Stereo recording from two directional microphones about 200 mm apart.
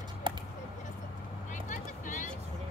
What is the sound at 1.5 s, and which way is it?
Vehicle, 40° left (ahead or behind).